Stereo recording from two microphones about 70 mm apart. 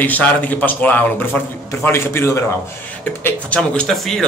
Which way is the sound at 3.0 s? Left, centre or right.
Left.